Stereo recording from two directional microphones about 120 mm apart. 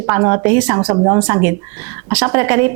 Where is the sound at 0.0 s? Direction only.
20° right (ahead or behind).